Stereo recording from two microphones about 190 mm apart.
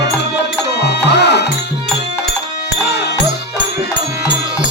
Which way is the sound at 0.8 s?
60° left (ahead or behind).